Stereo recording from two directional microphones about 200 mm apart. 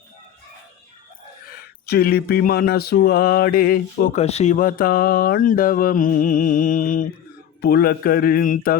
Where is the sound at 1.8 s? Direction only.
50° left (ahead or behind).